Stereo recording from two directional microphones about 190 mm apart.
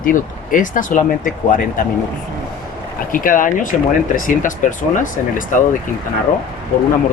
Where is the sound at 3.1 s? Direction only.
45° left (ahead or behind).